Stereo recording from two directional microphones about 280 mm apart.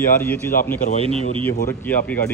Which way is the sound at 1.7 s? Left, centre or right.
Centre.